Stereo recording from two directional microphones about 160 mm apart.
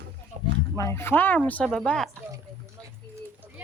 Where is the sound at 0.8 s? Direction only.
15° left (ahead or behind).